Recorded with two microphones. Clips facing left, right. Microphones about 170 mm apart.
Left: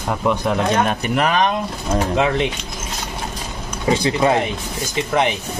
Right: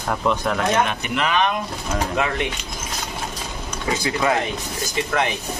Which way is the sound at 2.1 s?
20° left (ahead or behind).